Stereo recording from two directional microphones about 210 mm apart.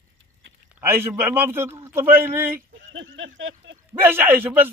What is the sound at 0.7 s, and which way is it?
Speech, 10° right (ahead or behind).